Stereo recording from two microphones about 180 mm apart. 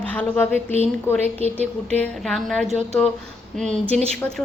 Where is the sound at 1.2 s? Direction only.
35° right (ahead or behind).